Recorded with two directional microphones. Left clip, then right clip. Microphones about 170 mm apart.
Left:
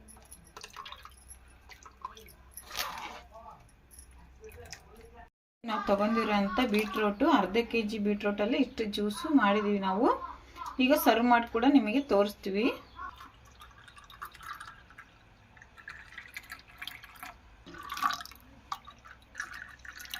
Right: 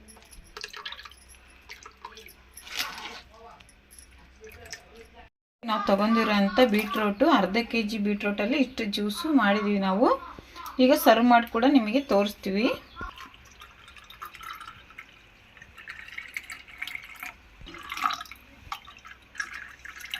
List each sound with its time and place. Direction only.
0.5 s drip: 10° left (ahead or behind)
5.6 s speech: 20° right (ahead or behind)
16.8 s drip: 10° left (ahead or behind)